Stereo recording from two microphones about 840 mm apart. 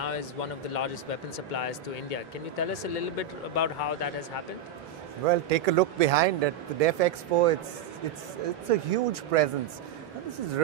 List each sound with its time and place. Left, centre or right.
0.0 s speech: left
5.3 s speech: right
8.6 s speech: right